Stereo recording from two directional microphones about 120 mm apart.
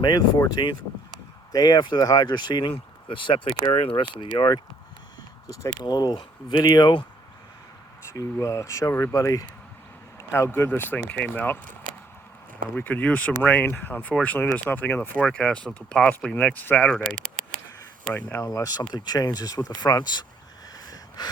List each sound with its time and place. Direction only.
0.0 s speech: 35° left (ahead or behind)
8.1 s speech: 25° left (ahead or behind)
12.7 s speech: 10° left (ahead or behind)
18.1 s speech: 15° left (ahead or behind)
18.4 s speech: 30° left (ahead or behind)
20.8 s a sound: 30° left (ahead or behind)